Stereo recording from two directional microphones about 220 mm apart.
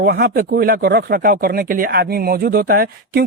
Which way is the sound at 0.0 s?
45° right (ahead or behind).